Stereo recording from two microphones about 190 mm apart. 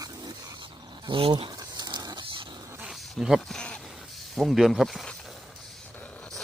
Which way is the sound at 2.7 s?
5° right (ahead or behind).